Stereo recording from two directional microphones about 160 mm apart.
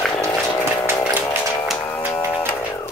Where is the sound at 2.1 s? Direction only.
15° left (ahead or behind).